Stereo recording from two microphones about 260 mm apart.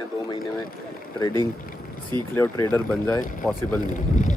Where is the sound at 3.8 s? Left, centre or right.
Left.